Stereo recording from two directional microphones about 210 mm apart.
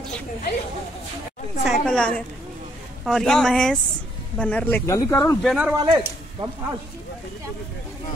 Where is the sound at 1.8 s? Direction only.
5° left (ahead or behind).